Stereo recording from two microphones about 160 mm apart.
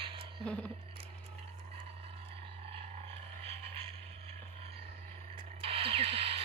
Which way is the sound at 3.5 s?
35° right (ahead or behind).